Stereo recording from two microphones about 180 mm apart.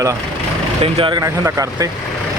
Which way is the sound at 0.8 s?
30° right (ahead or behind).